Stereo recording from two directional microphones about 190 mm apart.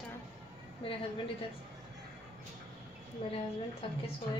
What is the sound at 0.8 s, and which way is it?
Speech, 30° left (ahead or behind).